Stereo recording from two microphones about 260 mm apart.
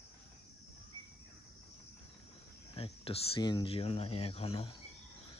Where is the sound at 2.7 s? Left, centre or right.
Left.